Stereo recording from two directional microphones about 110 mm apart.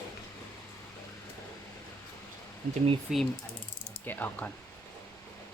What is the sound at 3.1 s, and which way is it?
Speech, 5° right (ahead or behind).